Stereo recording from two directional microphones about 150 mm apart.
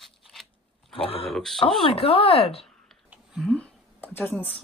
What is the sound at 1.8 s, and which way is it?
Speech, 40° left (ahead or behind).